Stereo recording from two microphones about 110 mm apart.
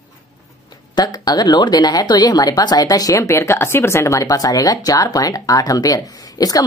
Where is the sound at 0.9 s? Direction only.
40° left (ahead or behind).